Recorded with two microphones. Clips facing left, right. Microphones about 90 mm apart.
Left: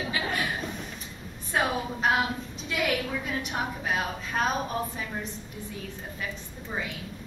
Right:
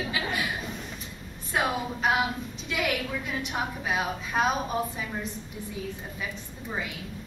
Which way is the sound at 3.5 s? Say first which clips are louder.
Right 1 dB; 10° right (ahead or behind).